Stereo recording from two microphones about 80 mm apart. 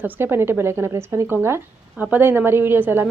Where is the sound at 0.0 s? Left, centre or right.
Right.